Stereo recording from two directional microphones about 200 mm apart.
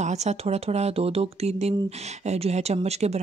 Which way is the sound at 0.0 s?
35° right (ahead or behind).